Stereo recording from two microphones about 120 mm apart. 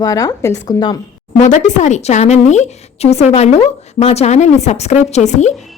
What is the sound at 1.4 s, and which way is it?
A woman's voice, 85° left.